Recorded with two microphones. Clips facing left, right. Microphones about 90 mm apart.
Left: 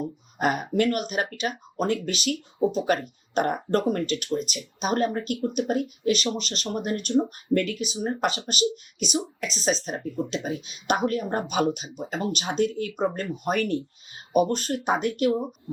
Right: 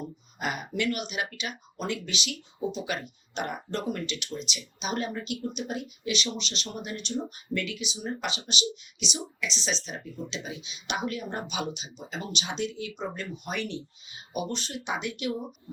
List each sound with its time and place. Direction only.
0.0 s speech: 45° left (ahead or behind)